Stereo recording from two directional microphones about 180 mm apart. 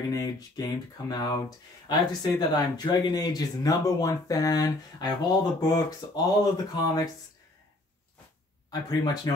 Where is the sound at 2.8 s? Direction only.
25° left (ahead or behind).